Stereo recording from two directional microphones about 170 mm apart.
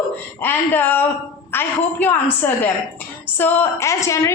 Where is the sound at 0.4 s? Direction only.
10° left (ahead or behind).